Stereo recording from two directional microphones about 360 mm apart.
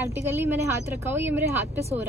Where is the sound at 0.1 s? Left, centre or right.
Centre.